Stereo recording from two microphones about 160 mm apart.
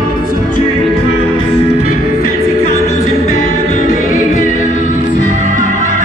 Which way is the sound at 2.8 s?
50° left (ahead or behind).